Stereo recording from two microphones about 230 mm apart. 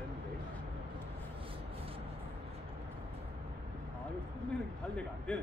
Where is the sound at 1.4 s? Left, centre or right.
Right.